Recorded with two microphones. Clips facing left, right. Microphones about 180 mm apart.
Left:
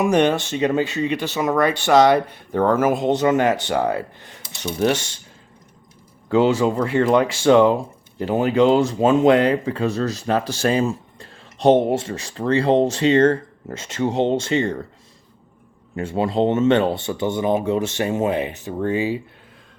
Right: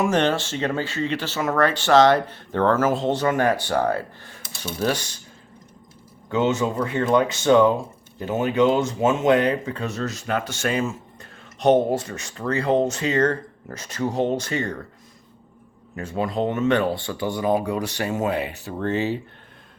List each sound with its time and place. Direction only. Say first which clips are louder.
0.0 s speech: left 3 dB; 15° left (ahead or behind)
6.3 s speech: left 5 dB; 30° left (ahead or behind)
16.0 s speech: left 5 dB; 25° left (ahead or behind)